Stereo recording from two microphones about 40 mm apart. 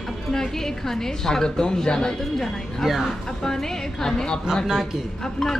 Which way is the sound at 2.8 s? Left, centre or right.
Centre.